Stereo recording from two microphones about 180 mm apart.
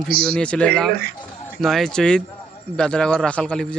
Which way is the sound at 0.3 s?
5° left (ahead or behind).